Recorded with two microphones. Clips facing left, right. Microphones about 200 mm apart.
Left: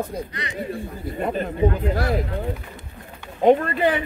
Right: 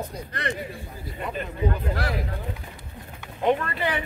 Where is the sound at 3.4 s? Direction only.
45° left (ahead or behind).